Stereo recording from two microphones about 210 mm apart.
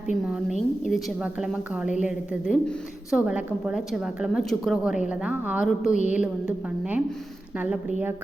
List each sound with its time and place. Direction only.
0.3 s a woman's voice: 5° right (ahead or behind)
5.9 s a woman's voice: 35° left (ahead or behind)
6.1 s a woman's voice: 5° right (ahead or behind)